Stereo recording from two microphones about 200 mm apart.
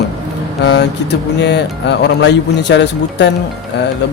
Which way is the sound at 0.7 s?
60° left (ahead or behind).